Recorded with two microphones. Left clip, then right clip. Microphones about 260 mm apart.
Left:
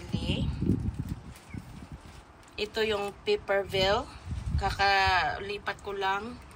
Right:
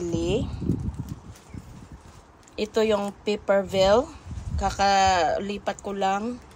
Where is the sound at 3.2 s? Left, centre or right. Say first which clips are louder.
Right 3 dB; centre.